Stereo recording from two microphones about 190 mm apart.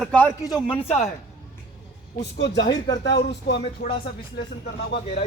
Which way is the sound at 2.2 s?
65° left (ahead or behind).